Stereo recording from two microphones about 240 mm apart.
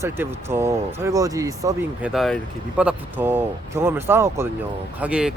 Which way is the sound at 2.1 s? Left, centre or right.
Centre.